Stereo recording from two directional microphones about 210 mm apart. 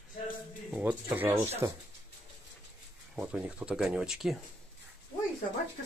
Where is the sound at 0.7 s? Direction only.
5° right (ahead or behind).